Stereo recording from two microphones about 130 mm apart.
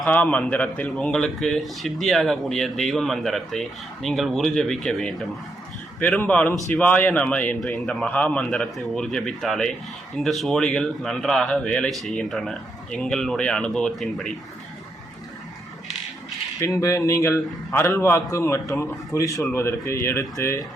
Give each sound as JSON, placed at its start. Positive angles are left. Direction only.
{"t": 0.0, "sound": "speech", "side_deg": 10}
{"t": 16.6, "sound": "a man's voice", "side_deg": 20}